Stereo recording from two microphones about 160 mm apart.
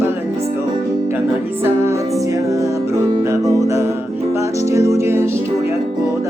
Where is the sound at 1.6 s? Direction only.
15° right (ahead or behind).